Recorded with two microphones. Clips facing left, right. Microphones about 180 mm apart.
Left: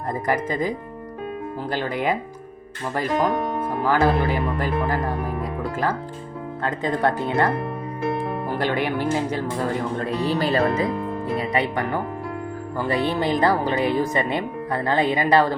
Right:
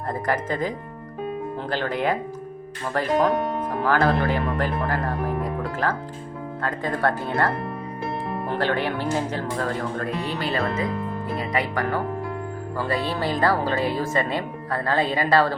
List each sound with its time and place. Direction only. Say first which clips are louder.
0.1 s speech: left 2 dB; 10° left (ahead or behind)
1.7 s speech: even; 10° left (ahead or behind)
3.2 s speech: right 1 dB; centre (ahead or behind)
3.8 s speech: left 1 dB; 15° left (ahead or behind)
5.8 s speech: left 1 dB; 10° left (ahead or behind)
10.2 s speech: left 8 dB; 35° left (ahead or behind)
11.5 s speech: right 1 dB; 25° left (ahead or behind)